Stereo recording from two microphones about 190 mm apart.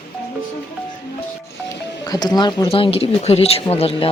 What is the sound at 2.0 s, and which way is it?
Speech, 20° left (ahead or behind).